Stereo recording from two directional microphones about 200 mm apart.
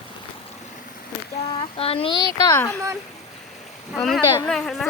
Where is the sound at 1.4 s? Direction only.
25° left (ahead or behind).